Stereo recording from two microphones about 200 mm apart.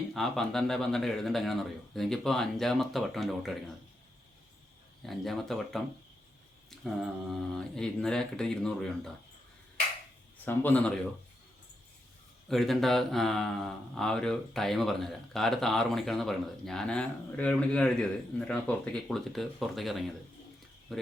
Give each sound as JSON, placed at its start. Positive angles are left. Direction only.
{"t": 0.1, "sound": "speech", "side_deg": 0}
{"t": 5.0, "sound": "speech", "side_deg": 0}
{"t": 10.4, "sound": "a man's voice", "side_deg": 10}
{"t": 12.5, "sound": "speech", "side_deg": 0}